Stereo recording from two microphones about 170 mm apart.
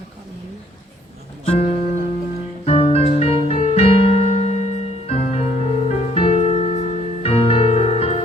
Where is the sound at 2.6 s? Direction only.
35° left (ahead or behind).